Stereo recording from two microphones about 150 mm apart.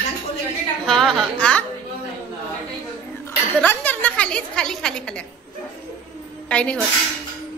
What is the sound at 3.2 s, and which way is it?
Speech, 10° left (ahead or behind).